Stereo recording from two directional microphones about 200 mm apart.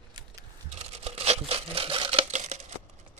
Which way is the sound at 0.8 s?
30° right (ahead or behind).